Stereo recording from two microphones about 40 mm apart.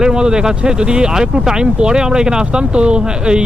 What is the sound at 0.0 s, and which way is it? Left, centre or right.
Speech, centre.